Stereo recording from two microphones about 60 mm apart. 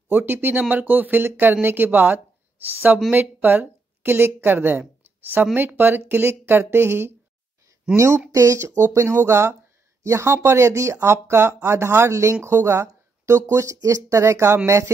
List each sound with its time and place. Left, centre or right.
0.1 s a woman's voice: right
3.4 s a woman's voice: right
7.9 s speech: right
13.7 s speech: right